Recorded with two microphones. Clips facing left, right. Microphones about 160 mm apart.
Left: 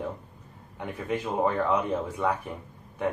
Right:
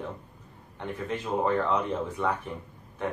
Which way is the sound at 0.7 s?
10° left (ahead or behind).